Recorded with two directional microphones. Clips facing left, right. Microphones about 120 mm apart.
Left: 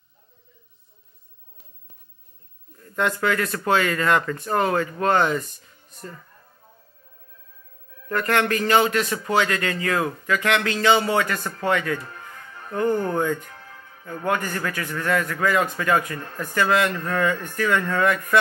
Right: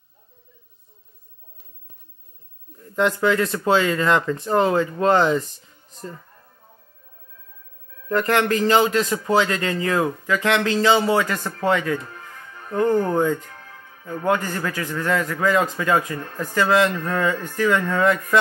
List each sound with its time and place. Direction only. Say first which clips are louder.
3.0 s a man's voice: right 4 dB; 20° right (ahead or behind)
8.1 s a man's voice: right 2 dB; 20° right (ahead or behind)